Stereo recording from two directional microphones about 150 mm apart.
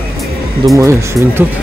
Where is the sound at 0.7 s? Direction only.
15° right (ahead or behind).